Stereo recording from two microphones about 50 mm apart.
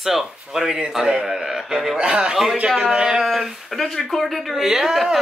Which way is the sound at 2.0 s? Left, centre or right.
Centre.